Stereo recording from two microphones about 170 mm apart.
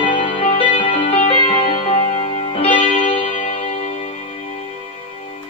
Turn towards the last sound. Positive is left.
turn(degrees=35)  # may be behind; listen again after turning